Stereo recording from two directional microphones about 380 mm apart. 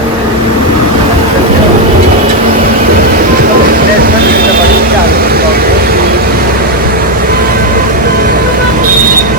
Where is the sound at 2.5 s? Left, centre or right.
Right.